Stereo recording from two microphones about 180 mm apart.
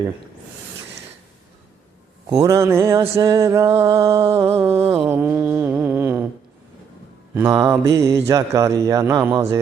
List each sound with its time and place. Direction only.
2.3 s mantra: 15° right (ahead or behind)
7.3 s mantra: 15° right (ahead or behind)